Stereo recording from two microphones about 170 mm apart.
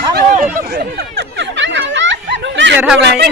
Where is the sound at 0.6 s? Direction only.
65° right (ahead or behind); by 2.7 s 90° right.